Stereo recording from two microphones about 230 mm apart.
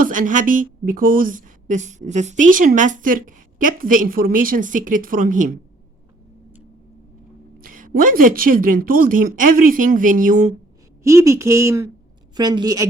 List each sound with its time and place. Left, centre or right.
0.0 s a woman's voice: right
7.6 s a woman's voice: right
11.0 s speech: centre